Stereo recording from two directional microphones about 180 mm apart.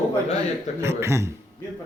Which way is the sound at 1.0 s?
15° right (ahead or behind).